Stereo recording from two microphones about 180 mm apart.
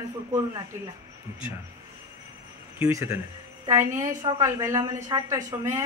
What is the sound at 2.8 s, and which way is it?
A woman's voice, 15° right (ahead or behind).